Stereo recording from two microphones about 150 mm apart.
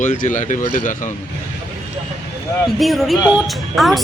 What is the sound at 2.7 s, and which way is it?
Speech, centre (ahead or behind).